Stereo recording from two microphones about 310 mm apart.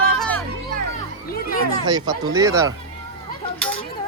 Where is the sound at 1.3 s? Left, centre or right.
Left.